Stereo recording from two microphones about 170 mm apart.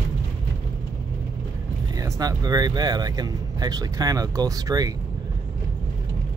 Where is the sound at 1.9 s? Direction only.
20° right (ahead or behind).